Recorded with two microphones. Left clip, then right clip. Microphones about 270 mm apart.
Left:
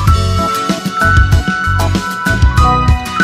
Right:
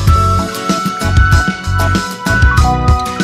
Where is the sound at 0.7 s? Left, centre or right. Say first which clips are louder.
Left 3 dB; centre.